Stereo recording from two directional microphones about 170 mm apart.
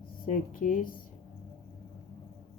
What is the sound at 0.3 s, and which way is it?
Speech, 50° left (ahead or behind).